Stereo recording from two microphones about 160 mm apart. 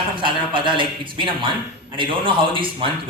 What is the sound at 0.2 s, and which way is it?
A man's voice, 30° right (ahead or behind).